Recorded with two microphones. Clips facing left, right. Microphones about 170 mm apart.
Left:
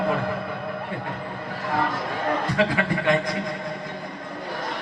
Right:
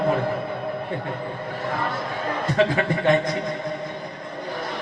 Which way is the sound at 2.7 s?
25° right (ahead or behind).